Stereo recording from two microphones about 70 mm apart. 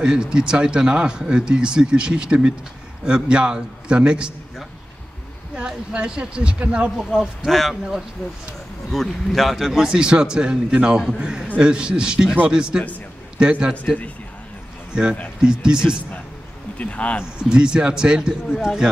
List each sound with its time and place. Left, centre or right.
0.0 s speech: centre
5.6 s speech: centre
8.9 s speech: centre
9.7 s speech: centre
16.7 s speech: centre
17.4 s speech: centre